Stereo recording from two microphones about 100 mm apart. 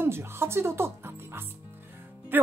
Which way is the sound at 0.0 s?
25° right (ahead or behind).